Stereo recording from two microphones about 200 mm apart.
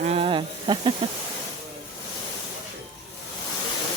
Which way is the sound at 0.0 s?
30° right (ahead or behind).